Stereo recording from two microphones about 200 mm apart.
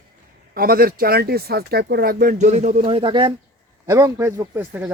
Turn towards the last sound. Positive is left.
turn(degrees=-10)  # may be behind; listen again after turning